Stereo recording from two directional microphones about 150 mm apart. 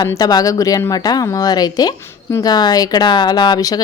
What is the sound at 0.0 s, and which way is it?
Speech, 25° left (ahead or behind).